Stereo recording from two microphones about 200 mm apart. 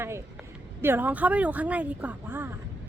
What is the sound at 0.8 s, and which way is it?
Speech, 10° right (ahead or behind).